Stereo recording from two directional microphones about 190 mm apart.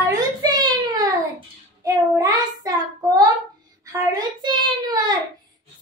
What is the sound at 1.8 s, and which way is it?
Child singing, 15° right (ahead or behind).